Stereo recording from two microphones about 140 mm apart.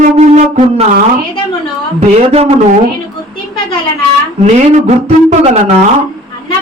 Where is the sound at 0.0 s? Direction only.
60° right (ahead or behind).